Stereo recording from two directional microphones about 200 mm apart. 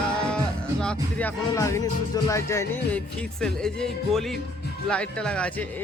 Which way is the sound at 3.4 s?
5° left (ahead or behind).